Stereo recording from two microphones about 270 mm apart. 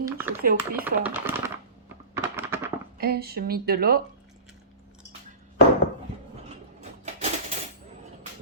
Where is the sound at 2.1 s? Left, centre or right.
Centre.